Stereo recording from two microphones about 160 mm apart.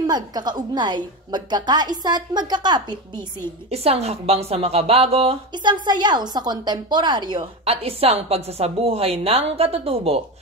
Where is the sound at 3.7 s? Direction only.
40° right (ahead or behind).